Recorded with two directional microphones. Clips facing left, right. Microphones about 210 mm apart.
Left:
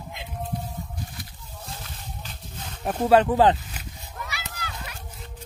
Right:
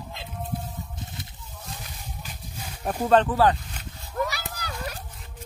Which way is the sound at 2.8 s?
5° left (ahead or behind).